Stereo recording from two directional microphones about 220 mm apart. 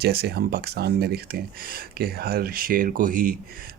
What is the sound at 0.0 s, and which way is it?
Speech, 45° right (ahead or behind).